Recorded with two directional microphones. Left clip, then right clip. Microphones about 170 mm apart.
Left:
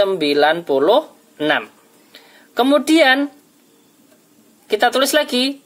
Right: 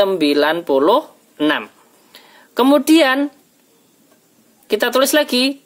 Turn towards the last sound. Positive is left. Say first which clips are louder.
# right 1 dB
turn(degrees=-40)  # may be behind; listen again after turning